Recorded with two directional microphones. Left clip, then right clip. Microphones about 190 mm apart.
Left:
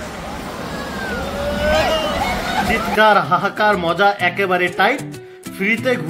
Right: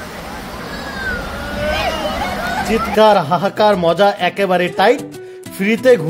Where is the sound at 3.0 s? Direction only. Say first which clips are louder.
Right 2 dB; 45° right (ahead or behind).